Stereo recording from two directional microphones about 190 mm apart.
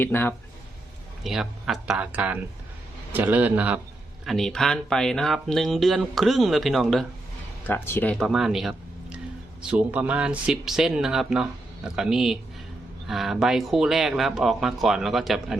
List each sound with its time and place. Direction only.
0.0 s speech: 10° left (ahead or behind)
1.2 s a man's voice: centre (ahead or behind)